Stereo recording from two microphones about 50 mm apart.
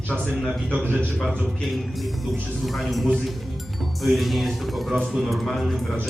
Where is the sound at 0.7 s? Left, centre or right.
Right.